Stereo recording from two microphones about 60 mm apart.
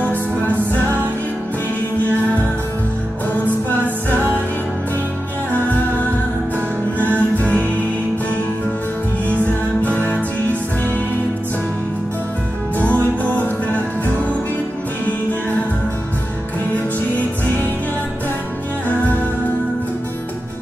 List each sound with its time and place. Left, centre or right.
0.1 s music: right
3.8 s music: right
5.5 s music: left
7.2 s music: left
9.9 s music: left
12.7 s music: left